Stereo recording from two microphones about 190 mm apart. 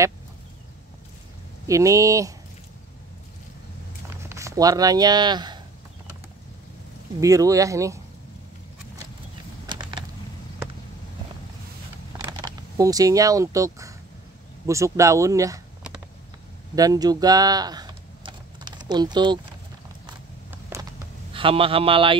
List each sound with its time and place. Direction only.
1.7 s speech: 15° right (ahead or behind)
4.2 s speech: 15° right (ahead or behind)
7.2 s speech: 15° right (ahead or behind)
9.7 s typing: 25° right (ahead or behind)
12.2 s speech: 20° right (ahead or behind)
16.7 s typing: 20° right (ahead or behind)
20.7 s a sound: 15° right (ahead or behind)
21.3 s speech: 30° right (ahead or behind)